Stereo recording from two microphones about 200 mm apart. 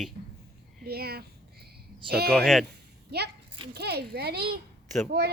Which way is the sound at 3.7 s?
55° right (ahead or behind).